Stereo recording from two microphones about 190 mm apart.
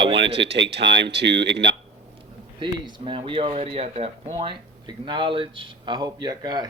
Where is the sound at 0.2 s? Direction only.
65° right (ahead or behind).